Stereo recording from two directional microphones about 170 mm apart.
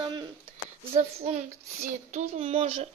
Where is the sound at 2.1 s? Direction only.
40° right (ahead or behind).